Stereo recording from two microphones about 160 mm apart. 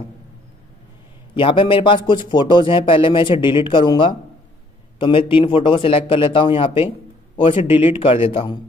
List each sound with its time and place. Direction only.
1.3 s a man's voice: 30° left (ahead or behind)